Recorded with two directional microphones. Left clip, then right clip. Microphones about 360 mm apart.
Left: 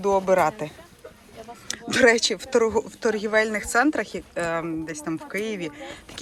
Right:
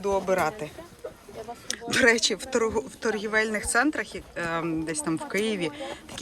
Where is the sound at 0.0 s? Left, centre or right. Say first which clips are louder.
Left 5 dB; centre.